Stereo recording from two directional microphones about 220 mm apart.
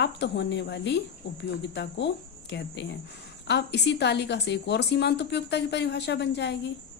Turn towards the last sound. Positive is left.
turn(degrees=50)  # may be behind; listen again after turning